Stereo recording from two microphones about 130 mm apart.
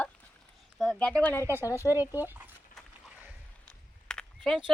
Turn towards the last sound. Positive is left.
turn(degrees=5)  # may be behind; listen again after turning